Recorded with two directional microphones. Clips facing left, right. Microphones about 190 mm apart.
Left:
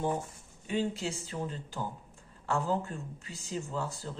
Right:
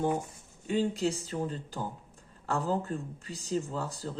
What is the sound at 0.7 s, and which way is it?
Speech, 40° right (ahead or behind).